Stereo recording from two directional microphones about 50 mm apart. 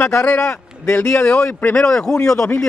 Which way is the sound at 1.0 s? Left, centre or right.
Left.